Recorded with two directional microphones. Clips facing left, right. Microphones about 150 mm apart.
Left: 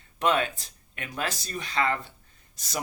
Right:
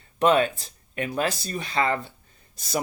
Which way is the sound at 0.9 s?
40° right (ahead or behind).